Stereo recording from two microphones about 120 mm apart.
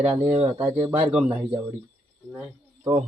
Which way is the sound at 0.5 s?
20° right (ahead or behind).